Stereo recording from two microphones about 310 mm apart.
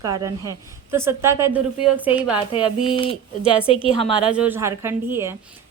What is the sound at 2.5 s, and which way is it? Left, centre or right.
Speech, centre.